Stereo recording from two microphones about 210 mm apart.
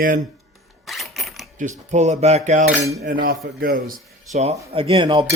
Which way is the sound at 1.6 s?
35° right (ahead or behind).